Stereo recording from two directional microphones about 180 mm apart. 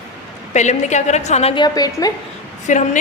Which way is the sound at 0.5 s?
40° left (ahead or behind).